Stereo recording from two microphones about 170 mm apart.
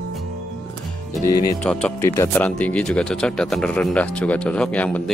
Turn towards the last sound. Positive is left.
turn(degrees=10)  # may be behind; listen again after turning